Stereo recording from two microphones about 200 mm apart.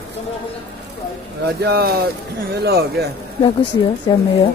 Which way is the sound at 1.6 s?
50° right (ahead or behind).